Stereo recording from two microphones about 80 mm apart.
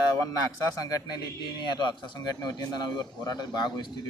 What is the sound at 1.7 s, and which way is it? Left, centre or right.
Speech, left.